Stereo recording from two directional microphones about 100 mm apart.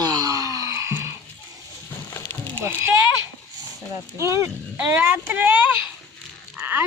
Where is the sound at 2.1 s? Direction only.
25° left (ahead or behind).